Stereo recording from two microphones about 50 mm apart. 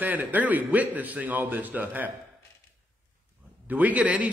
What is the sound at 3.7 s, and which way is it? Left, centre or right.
Speech, right.